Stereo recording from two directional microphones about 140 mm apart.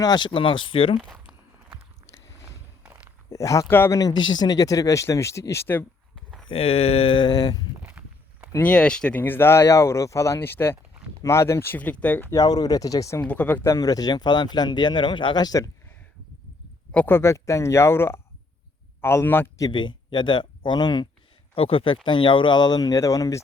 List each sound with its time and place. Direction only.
0.0 s speech: 30° left (ahead or behind)
1.1 s walk: 5° right (ahead or behind)
3.2 s speech: 25° left (ahead or behind)
6.1 s a sound: centre (ahead or behind)
6.5 s speech: 45° left (ahead or behind); by 7.6 s 30° left (ahead or behind)
7.8 s walk: 10° right (ahead or behind)
8.5 s speech: 10° left (ahead or behind)
13.2 s speech: 10° left (ahead or behind); by 15.7 s 25° left (ahead or behind)
16.9 s speech: 15° left (ahead or behind)
19.6 s speech: 35° left (ahead or behind)
21.5 s speech: 40° left (ahead or behind); by 23.4 s 25° left (ahead or behind)